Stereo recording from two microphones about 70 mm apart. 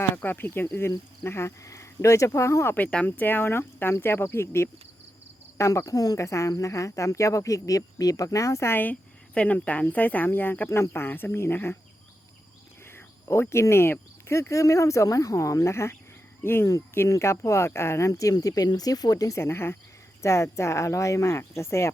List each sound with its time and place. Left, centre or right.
0.0 s speech: left
2.7 s speech: left
5.5 s speech: left
6.2 s speech: left
8.7 s speech: left
12.8 s speech: left
17.1 s speech: left
19.4 s speech: left